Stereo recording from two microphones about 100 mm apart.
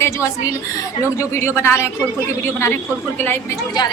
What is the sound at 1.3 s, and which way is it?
Speech, 25° left (ahead or behind).